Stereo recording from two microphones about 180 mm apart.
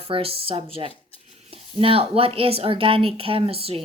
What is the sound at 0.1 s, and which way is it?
Speech, 30° right (ahead or behind).